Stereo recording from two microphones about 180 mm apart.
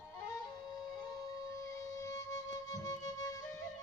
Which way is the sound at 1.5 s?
15° left (ahead or behind).